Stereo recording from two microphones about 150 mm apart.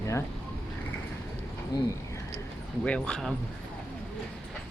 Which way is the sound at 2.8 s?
5° left (ahead or behind).